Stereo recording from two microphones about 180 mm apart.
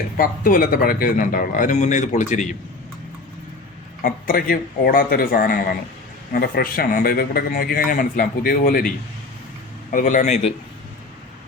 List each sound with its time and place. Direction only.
0.2 s a man's voice: 50° left (ahead or behind)
4.0 s a man's voice: 50° left (ahead or behind)
9.9 s speech: 45° left (ahead or behind)